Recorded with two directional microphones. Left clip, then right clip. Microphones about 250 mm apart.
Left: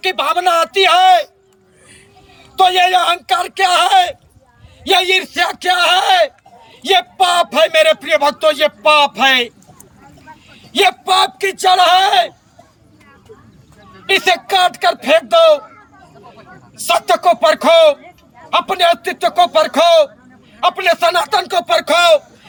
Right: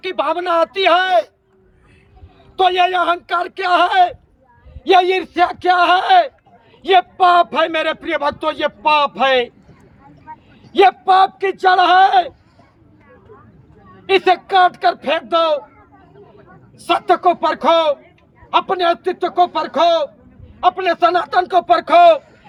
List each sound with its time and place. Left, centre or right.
0.0 s speech: centre
2.6 s a man's voice: centre
14.1 s a man's voice: centre